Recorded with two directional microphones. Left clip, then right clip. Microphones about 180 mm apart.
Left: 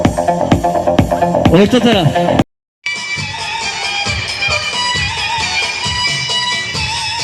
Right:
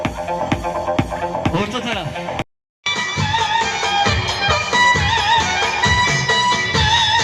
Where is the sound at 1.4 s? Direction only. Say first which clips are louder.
Left 13 dB; 55° left (ahead or behind).